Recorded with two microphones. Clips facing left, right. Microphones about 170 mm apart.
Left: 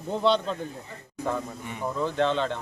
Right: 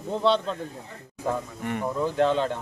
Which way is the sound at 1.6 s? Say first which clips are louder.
Right 8 dB; 70° right (ahead or behind).